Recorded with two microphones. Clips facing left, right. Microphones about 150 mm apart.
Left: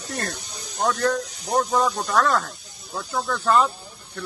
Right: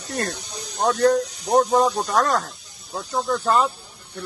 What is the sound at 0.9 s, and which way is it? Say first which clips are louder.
Speech: right 5 dB; 40° right (ahead or behind).